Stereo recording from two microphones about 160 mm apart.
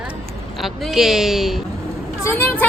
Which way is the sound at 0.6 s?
Centre (ahead or behind).